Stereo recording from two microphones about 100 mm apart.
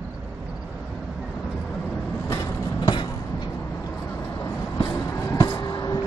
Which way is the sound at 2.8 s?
50° left (ahead or behind).